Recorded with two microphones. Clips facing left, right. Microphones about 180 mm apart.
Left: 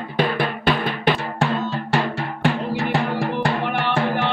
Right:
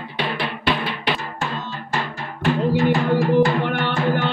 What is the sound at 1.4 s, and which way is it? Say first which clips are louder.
Music: left 6 dB; 70° left (ahead or behind).